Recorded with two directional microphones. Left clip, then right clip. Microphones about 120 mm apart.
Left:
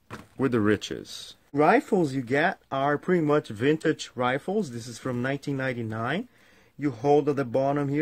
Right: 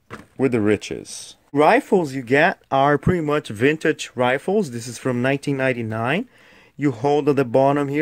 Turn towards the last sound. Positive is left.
turn(degrees=-60)  # may be behind; listen again after turning